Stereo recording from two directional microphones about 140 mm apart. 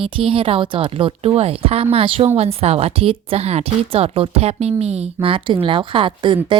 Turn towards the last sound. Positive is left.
turn(degrees=-35)  # may be behind; listen again after turning